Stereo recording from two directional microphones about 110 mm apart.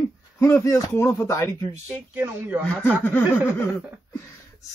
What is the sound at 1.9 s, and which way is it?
Speech, 15° right (ahead or behind).